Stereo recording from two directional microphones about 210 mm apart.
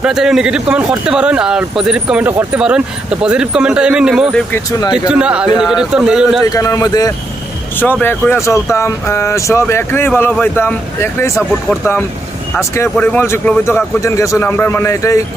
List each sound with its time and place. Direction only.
0.0 s a man's voice: 5° right (ahead or behind)
4.5 s speech: 15° left (ahead or behind)
4.9 s a man's voice: 5° right (ahead or behind)
6.5 s speech: 15° left (ahead or behind)
12.5 s speech: 10° left (ahead or behind)